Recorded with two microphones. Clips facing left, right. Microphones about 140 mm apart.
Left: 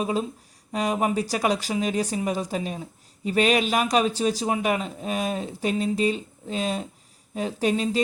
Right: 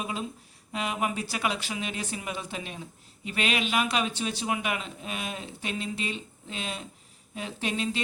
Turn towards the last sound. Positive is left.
turn(degrees=40)  # may be behind; listen again after turning